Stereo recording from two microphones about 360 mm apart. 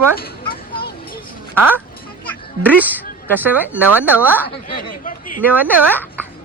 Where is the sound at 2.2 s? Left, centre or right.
Centre.